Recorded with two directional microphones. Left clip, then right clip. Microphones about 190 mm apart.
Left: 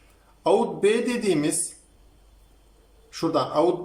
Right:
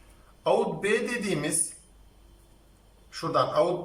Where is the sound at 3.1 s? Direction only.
25° left (ahead or behind).